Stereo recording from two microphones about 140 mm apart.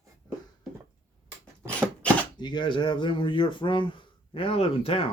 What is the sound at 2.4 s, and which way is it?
Speech, 30° left (ahead or behind).